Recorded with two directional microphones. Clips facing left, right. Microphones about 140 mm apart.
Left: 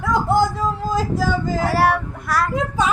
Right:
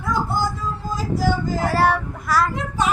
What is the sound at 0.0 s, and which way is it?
Music, 90° left.